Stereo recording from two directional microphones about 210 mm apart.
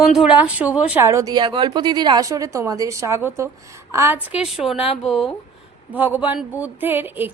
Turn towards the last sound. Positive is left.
turn(degrees=-10)  # may be behind; listen again after turning